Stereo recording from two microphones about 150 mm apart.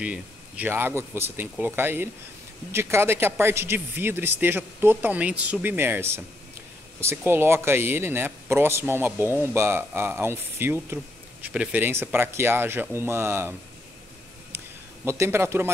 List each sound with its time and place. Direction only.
0.0 s a man's voice: 10° right (ahead or behind)
15.0 s a man's voice: 15° right (ahead or behind)